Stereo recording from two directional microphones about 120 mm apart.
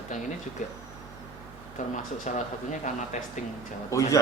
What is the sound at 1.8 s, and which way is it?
Speech, 90° left.